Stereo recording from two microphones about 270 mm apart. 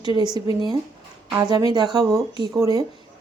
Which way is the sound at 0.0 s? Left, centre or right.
Centre.